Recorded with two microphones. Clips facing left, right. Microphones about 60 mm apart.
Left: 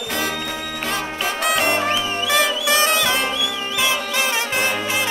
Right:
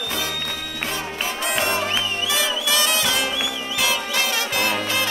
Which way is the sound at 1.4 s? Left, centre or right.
Left.